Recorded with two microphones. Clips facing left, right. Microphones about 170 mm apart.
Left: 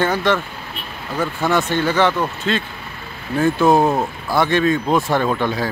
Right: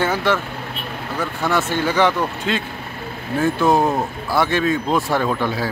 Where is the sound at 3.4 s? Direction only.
5° left (ahead or behind).